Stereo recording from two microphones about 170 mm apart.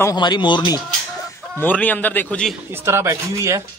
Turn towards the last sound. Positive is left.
turn(degrees=-15)  # may be behind; listen again after turning